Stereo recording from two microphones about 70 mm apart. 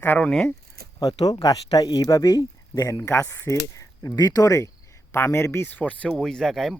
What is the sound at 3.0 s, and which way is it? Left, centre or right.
Speech, left.